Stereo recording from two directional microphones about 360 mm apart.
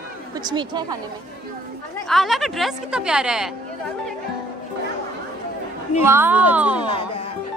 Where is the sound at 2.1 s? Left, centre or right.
Centre.